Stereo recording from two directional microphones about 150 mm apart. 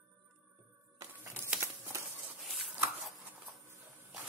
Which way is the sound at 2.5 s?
Centre (ahead or behind).